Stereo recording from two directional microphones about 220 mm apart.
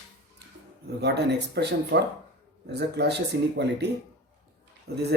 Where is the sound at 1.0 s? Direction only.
50° right (ahead or behind).